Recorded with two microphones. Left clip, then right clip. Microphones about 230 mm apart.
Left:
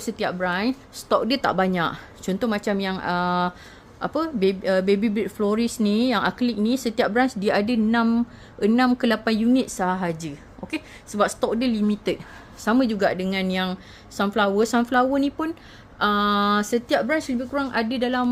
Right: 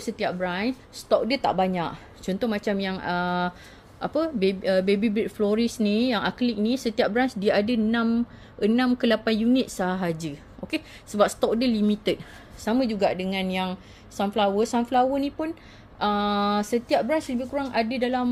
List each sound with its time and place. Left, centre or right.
0.0 s speech: centre
9.7 s a woman's voice: centre
12.6 s speech: centre